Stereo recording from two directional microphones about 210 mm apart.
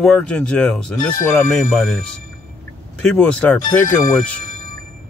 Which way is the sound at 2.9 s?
5° left (ahead or behind).